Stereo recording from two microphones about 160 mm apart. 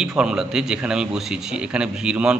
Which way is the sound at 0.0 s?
5° right (ahead or behind).